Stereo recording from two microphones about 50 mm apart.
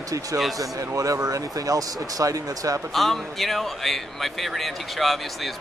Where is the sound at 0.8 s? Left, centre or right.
Right.